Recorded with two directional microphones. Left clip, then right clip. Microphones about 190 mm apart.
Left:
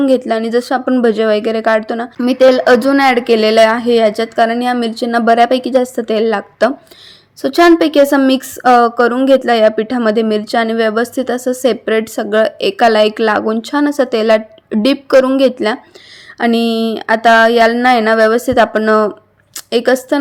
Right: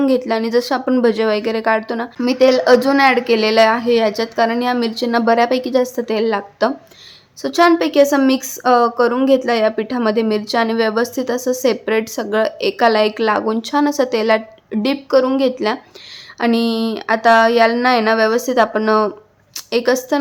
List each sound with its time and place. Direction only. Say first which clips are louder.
0.0 s a woman's voice: left 4 dB; 15° left (ahead or behind)